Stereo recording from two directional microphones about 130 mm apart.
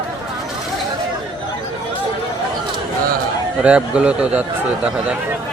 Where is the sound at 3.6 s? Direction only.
10° right (ahead or behind).